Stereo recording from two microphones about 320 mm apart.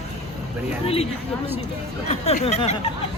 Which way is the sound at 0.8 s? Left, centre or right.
Centre.